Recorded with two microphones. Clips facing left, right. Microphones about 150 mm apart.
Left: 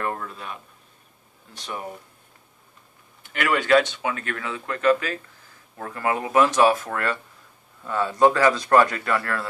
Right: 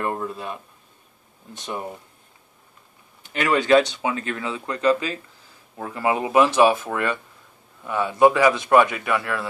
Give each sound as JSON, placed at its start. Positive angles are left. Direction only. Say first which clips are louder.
{"t": 0.0, "sound": "speech", "louder": "right 3 dB", "side_deg": -20}
{"t": 3.3, "sound": "speech", "louder": "right 2 dB", "side_deg": -20}
{"t": 6.7, "sound": "speech", "louder": "right 1 dB", "side_deg": -5}